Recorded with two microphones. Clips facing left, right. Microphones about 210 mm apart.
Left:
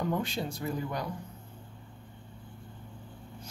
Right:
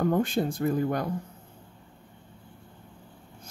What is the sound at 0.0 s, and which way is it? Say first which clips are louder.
Speech: right 7 dB; 50° right (ahead or behind).